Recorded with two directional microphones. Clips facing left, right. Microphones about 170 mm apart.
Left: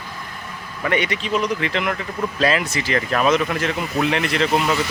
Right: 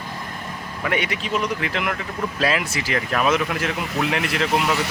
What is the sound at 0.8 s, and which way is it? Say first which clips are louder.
Speech: left 3 dB; 5° right (ahead or behind).